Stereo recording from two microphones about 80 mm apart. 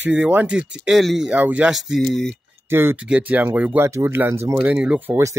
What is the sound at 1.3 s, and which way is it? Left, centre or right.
Speech, centre.